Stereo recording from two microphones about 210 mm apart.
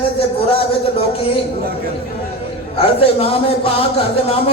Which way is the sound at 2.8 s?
25° left (ahead or behind).